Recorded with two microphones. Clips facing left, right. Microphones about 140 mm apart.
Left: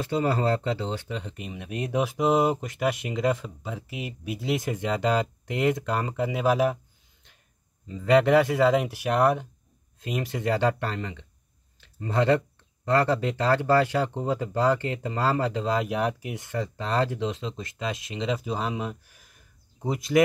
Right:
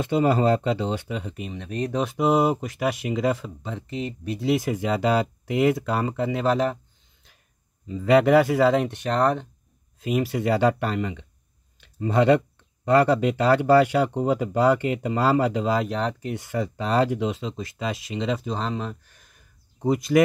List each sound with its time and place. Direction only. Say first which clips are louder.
0.0 s speech: right 4 dB; 20° right (ahead or behind); by 1.6 s centre (ahead or behind)
1.6 s speech: right 1 dB; 10° left (ahead or behind)
2.1 s speech: right 2 dB; centre (ahead or behind)
7.9 s speech: right 2 dB; 5° right (ahead or behind)
9.9 s speech: right 6 dB; 5° right (ahead or behind)
16.3 s speech: right 3 dB; 10° right (ahead or behind)